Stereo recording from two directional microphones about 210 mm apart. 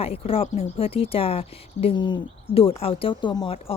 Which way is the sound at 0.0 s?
30° left (ahead or behind).